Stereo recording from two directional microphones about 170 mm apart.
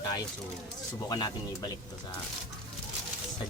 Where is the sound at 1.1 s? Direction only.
25° left (ahead or behind).